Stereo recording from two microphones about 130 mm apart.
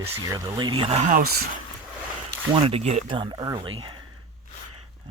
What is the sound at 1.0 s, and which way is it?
Speech, 90° right.